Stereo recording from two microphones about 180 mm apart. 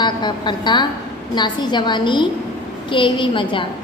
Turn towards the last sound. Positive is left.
turn(degrees=30)  # may be behind; listen again after turning